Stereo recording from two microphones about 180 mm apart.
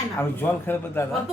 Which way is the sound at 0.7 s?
10° left (ahead or behind).